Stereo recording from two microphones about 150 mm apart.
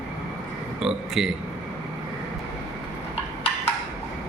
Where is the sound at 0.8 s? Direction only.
Centre (ahead or behind).